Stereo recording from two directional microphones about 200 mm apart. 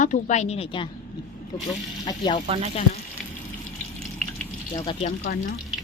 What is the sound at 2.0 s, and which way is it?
Speech, 20° left (ahead or behind).